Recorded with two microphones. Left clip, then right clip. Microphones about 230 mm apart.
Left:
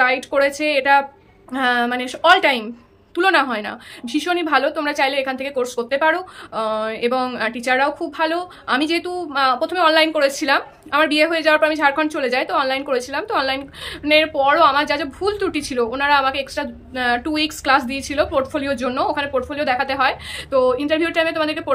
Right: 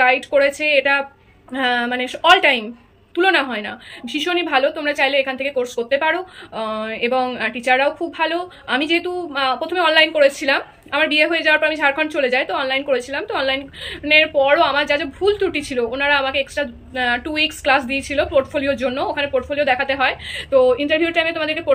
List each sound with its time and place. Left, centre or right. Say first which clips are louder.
0.0 s a woman's voice: right 2 dB; centre